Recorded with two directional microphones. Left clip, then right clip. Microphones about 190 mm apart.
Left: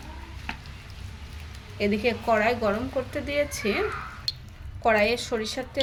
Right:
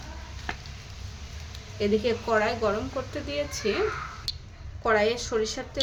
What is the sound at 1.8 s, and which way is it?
Speech, 15° left (ahead or behind).